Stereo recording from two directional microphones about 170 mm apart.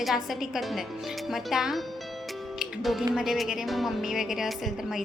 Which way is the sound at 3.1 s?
Centre (ahead or behind).